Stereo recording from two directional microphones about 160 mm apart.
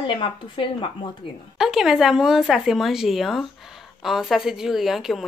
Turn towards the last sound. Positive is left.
turn(degrees=0)  # may be behind; listen again after turning